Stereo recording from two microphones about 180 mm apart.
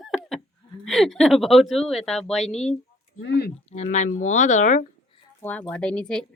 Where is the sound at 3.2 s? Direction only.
70° left (ahead or behind).